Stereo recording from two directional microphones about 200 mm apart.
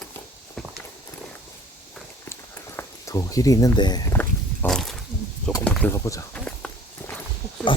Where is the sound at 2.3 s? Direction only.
15° left (ahead or behind).